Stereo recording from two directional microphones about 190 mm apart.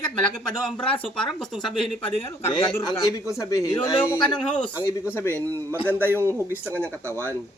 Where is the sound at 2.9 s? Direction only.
15° left (ahead or behind).